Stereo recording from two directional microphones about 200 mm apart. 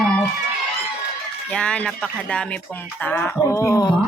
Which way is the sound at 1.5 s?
5° left (ahead or behind).